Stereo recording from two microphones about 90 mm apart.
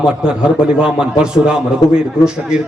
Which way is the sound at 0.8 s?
10° right (ahead or behind).